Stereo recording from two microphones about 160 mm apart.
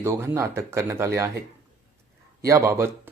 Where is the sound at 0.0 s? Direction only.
15° right (ahead or behind).